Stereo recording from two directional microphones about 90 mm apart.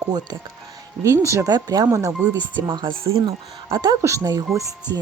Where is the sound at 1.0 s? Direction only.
35° right (ahead or behind).